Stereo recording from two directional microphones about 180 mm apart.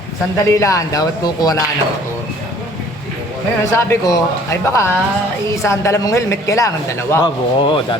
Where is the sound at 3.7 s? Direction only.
15° left (ahead or behind).